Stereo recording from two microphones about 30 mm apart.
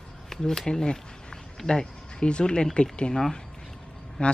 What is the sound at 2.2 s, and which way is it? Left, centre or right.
Speech, left.